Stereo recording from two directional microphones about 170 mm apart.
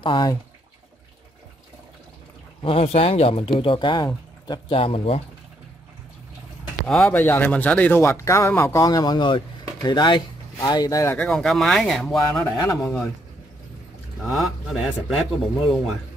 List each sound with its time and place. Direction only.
0.0 s speech: 25° left (ahead or behind)
2.6 s speech: 35° left (ahead or behind)
6.9 s speech: 5° left (ahead or behind)
11.1 s speech: 5° left (ahead or behind)
14.2 s speech: centre (ahead or behind)